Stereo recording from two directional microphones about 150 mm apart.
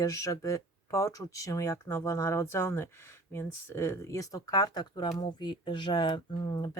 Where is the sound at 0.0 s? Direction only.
20° left (ahead or behind).